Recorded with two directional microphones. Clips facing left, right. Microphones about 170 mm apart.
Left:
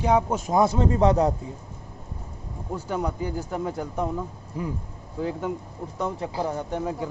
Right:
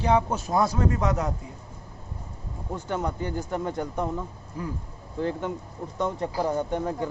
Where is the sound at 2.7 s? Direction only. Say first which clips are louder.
Left 1 dB; 10° left (ahead or behind).